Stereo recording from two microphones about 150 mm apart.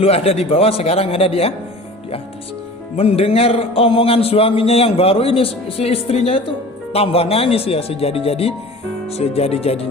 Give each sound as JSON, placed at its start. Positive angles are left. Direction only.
{"t": 0.0, "sound": "a man's voice", "side_deg": 40}
{"t": 3.0, "sound": "a man's voice", "side_deg": 40}